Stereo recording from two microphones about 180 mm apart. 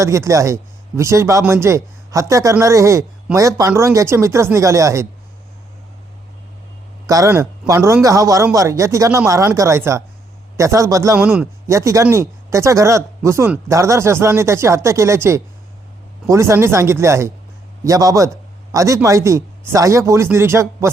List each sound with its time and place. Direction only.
0.0 s speech: 15° right (ahead or behind)
7.1 s speech: 15° right (ahead or behind)
11.2 s a man's voice: 5° right (ahead or behind)